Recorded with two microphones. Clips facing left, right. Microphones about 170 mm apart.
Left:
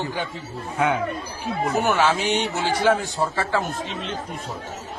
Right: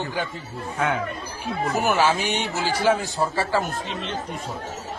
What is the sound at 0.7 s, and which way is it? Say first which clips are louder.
Speech: left 3 dB; 15° left (ahead or behind).